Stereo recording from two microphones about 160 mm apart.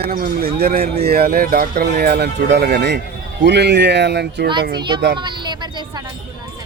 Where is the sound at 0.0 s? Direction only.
65° right (ahead or behind).